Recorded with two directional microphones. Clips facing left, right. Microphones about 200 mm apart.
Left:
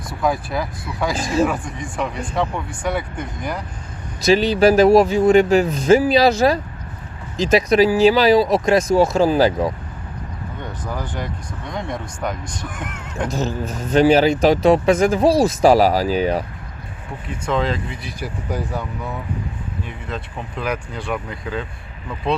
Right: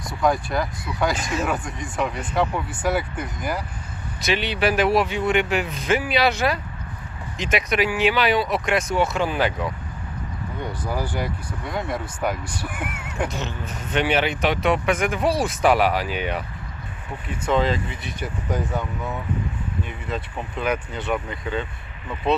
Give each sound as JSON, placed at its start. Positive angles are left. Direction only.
{"t": 0.1, "sound": "speech", "side_deg": 0}
{"t": 1.1, "sound": "speech", "side_deg": 35}
{"t": 1.5, "sound": "speech", "side_deg": 0}
{"t": 4.3, "sound": "speech", "side_deg": 40}
{"t": 10.6, "sound": "speech", "side_deg": -10}
{"t": 13.3, "sound": "speech", "side_deg": 35}
{"t": 17.2, "sound": "speech", "side_deg": -5}